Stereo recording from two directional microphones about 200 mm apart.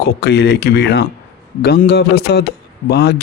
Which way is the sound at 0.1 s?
55° left (ahead or behind).